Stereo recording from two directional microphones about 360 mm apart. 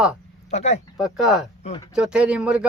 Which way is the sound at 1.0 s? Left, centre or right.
Centre.